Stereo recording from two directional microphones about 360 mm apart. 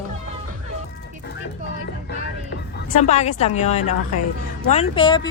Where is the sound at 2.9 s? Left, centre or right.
Centre.